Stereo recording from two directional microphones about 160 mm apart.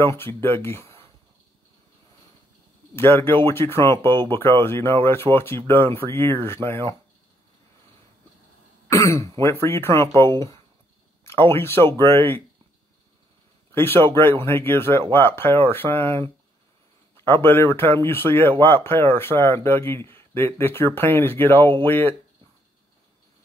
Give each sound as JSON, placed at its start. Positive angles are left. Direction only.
{"t": 0.0, "sound": "speech", "side_deg": 15}
{"t": 3.0, "sound": "speech", "side_deg": 15}
{"t": 8.9, "sound": "speech", "side_deg": 20}
{"t": 13.7, "sound": "speech", "side_deg": 15}